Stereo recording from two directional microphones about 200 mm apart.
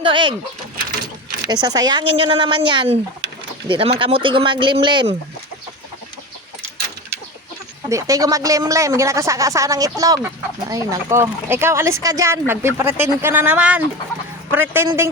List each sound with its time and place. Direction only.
0.0 s speech: 25° right (ahead or behind)
1.6 s speech: 20° right (ahead or behind)
7.9 s speech: 15° right (ahead or behind)